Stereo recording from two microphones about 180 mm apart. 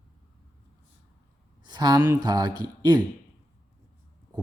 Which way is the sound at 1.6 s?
25° right (ahead or behind).